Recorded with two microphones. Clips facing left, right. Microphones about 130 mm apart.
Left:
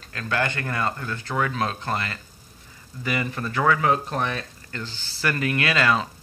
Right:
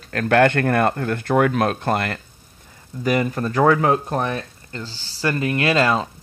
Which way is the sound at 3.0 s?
45° right (ahead or behind).